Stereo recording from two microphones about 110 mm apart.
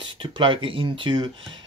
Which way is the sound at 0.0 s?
50° right (ahead or behind).